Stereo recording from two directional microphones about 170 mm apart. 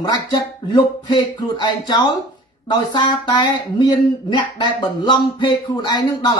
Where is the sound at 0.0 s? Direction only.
25° left (ahead or behind).